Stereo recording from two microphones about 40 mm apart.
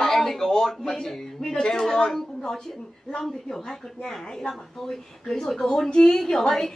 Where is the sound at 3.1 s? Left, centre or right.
Centre.